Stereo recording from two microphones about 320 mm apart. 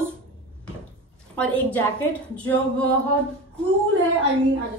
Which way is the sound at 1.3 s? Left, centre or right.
Centre.